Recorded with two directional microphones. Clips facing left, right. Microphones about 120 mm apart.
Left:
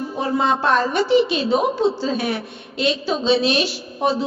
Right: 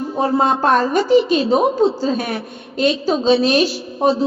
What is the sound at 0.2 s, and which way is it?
Child singing, 45° right (ahead or behind).